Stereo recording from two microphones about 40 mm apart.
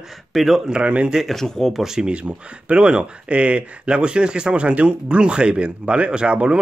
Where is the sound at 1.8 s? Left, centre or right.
Centre.